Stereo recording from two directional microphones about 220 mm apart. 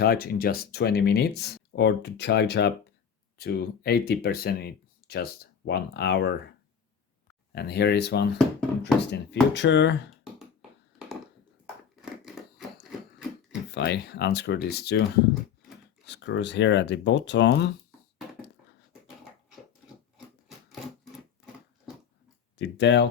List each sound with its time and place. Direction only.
0.0 s speech: 45° left (ahead or behind)
7.5 s speech: 45° left (ahead or behind)
10.3 s a sound: centre (ahead or behind)
12.8 s a sound: 5° right (ahead or behind)
13.7 s speech: 50° left (ahead or behind)
16.0 s speech: 50° left (ahead or behind)
22.5 s speech: 50° left (ahead or behind)